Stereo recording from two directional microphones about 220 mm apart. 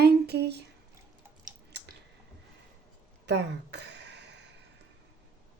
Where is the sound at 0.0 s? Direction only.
50° right (ahead or behind).